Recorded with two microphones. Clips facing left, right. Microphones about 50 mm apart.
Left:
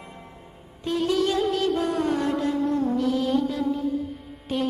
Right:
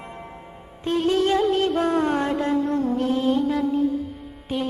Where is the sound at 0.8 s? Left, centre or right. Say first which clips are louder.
Right 3 dB; right.